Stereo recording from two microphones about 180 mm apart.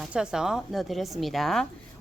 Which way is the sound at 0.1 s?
5° right (ahead or behind).